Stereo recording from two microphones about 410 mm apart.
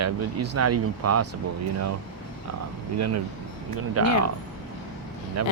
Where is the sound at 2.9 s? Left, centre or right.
Right.